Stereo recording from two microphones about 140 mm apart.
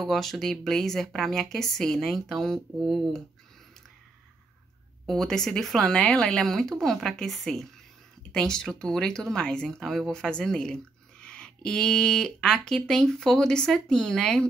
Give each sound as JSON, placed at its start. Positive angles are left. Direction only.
{"t": 0.0, "sound": "speech", "side_deg": 0}
{"t": 5.0, "sound": "speech", "side_deg": 5}